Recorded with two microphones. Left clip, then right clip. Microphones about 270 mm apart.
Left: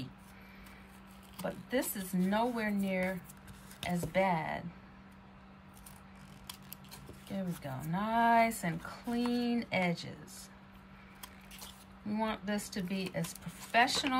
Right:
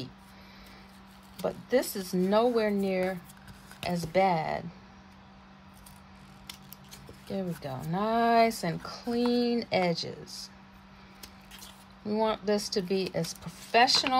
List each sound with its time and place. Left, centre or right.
1.7 s speech: centre
7.3 s speech: centre
12.1 s speech: centre